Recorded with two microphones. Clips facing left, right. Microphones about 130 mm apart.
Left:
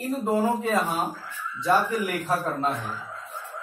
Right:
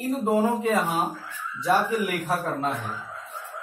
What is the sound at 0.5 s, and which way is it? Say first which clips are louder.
Speech: right 1 dB; 15° right (ahead or behind).